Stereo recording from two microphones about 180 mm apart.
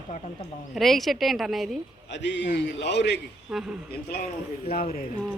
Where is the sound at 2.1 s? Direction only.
80° left.